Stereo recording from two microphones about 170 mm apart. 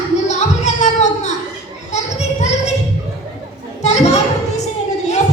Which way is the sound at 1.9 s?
40° left (ahead or behind).